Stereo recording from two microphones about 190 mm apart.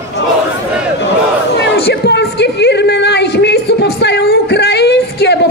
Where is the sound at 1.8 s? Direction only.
60° left (ahead or behind).